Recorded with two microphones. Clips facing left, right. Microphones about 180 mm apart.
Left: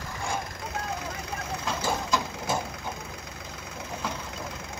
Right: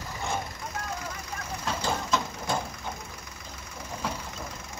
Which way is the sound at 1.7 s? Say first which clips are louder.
Even; centre (ahead or behind).